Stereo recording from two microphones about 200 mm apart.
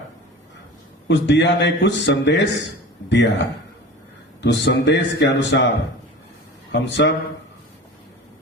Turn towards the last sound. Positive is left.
turn(degrees=60)  # may be behind; listen again after turning